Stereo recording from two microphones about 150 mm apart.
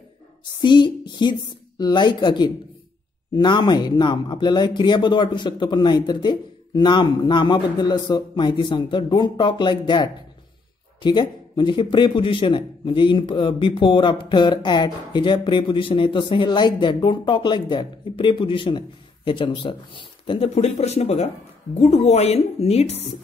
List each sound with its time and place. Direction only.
0.6 s a man's voice: 30° left (ahead or behind)